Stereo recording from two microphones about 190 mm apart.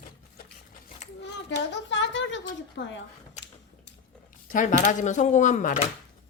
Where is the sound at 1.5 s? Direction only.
70° left (ahead or behind).